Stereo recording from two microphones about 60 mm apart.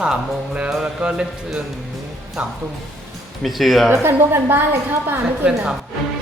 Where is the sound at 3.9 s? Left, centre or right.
Right.